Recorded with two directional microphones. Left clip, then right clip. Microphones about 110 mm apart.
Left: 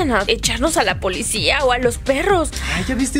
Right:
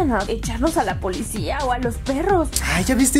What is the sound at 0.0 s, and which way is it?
Speech, 70° left (ahead or behind).